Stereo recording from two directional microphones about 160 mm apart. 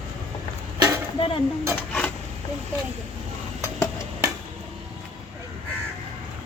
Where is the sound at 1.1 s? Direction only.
35° left (ahead or behind).